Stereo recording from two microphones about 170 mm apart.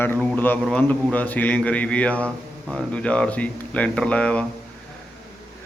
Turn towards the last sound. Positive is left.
turn(degrees=5)  # may be behind; listen again after turning